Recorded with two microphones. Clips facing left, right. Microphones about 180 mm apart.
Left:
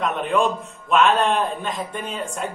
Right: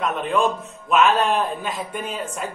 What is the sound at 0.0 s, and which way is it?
A man's voice, centre (ahead or behind).